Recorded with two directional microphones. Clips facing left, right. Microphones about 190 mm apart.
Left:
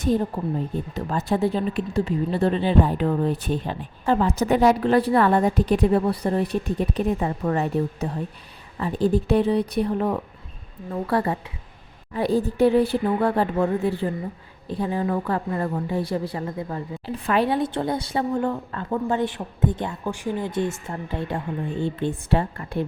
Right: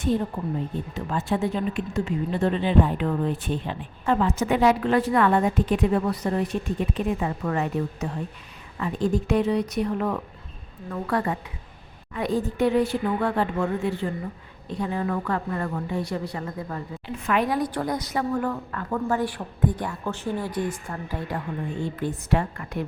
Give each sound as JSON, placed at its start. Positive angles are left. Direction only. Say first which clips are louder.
{"t": 0.9, "sound": "a woman's voice", "louder": "left 2 dB", "side_deg": 35}
{"t": 20.5, "sound": "a woman's voice", "louder": "left 3 dB", "side_deg": 25}